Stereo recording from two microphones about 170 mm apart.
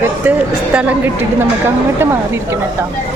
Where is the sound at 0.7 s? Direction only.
10° right (ahead or behind).